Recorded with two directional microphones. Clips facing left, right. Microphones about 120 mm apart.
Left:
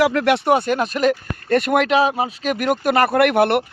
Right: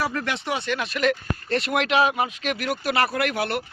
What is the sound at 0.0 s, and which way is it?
Speech, 75° left (ahead or behind).